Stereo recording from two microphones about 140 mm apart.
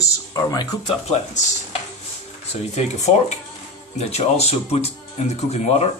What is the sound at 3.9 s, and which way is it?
Speech, 50° left (ahead or behind).